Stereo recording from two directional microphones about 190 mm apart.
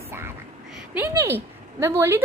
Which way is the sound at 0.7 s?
10° right (ahead or behind).